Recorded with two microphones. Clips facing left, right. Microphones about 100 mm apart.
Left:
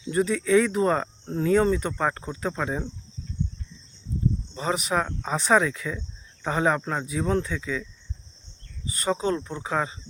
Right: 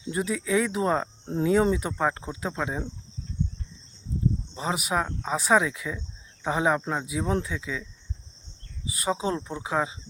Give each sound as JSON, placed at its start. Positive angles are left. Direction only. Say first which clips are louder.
{"t": 0.1, "sound": "speech", "louder": "left 5 dB", "side_deg": -5}
{"t": 4.5, "sound": "speech", "louder": "left 3 dB", "side_deg": -5}
{"t": 8.9, "sound": "speech", "louder": "left 2 dB", "side_deg": -5}